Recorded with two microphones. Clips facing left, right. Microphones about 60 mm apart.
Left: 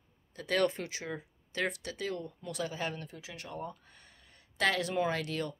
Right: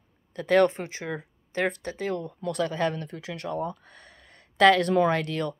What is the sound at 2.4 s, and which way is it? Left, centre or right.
Speech, right.